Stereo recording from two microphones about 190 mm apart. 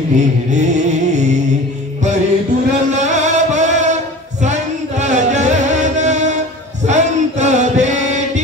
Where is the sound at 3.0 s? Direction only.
40° right (ahead or behind).